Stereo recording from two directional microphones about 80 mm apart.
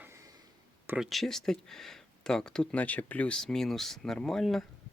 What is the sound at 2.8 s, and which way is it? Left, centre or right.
Speech, left.